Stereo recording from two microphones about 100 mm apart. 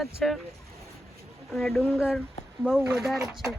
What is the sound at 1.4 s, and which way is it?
Speech, centre (ahead or behind).